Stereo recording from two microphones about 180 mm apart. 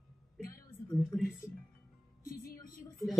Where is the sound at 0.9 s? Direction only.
Centre (ahead or behind).